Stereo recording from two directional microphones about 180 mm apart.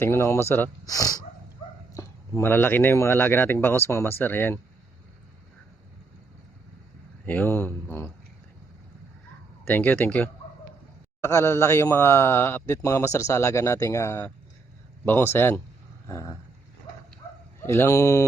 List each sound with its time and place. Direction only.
0.0 s speech: 15° left (ahead or behind)
7.3 s speech: 10° left (ahead or behind)
9.6 s speech: 10° left (ahead or behind)
17.6 s speech: 15° left (ahead or behind)